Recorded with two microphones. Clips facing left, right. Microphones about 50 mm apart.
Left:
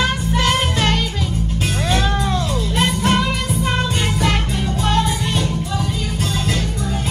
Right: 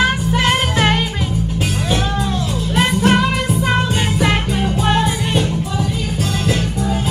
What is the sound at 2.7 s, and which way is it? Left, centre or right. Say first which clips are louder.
Music: right 4 dB; right.